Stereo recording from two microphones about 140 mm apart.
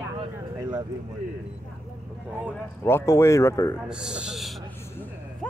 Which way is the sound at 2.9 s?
20° left (ahead or behind).